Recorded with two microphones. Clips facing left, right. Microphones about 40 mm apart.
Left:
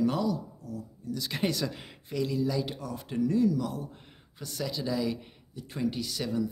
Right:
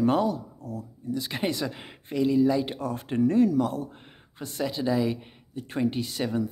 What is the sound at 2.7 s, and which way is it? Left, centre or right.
Speech, right.